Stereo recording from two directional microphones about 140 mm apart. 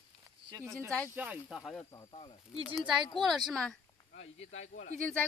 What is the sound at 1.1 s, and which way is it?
Speech, 10° right (ahead or behind).